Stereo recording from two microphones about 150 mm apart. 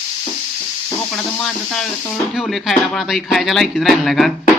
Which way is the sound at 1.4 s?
5° left (ahead or behind).